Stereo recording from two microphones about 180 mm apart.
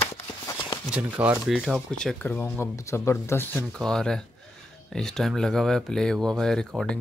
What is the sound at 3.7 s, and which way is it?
Speech, 5° left (ahead or behind).